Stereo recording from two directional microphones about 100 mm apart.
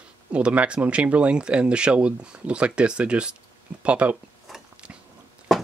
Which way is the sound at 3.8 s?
10° right (ahead or behind).